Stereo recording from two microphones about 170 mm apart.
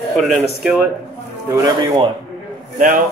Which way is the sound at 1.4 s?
20° right (ahead or behind).